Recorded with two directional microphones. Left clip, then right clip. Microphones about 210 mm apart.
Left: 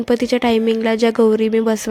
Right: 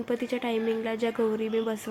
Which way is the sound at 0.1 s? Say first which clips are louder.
Left 13 dB; 40° left (ahead or behind).